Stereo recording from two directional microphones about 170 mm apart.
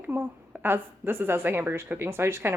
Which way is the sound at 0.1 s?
10° right (ahead or behind).